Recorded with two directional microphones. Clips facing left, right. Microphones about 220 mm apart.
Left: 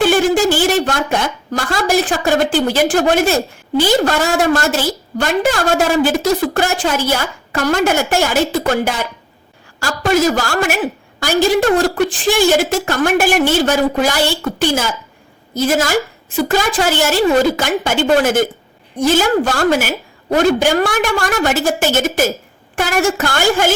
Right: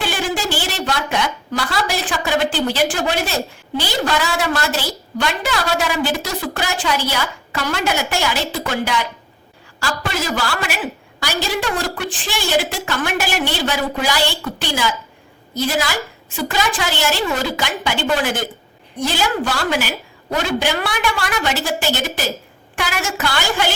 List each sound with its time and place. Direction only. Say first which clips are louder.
0.0 s a woman's voice: left 10 dB; 50° left (ahead or behind)